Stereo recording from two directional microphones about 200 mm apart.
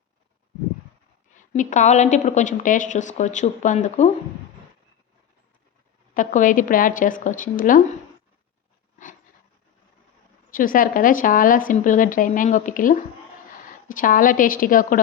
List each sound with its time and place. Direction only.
1.4 s a woman's voice: 40° left (ahead or behind)
6.1 s a woman's voice: 40° left (ahead or behind)
10.5 s a woman's voice: 45° left (ahead or behind)